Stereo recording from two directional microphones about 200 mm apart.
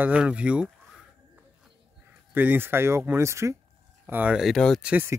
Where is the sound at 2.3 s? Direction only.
10° right (ahead or behind).